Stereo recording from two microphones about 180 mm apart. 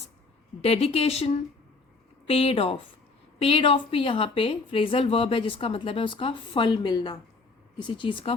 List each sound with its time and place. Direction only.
0.6 s a woman's voice: 35° left (ahead or behind)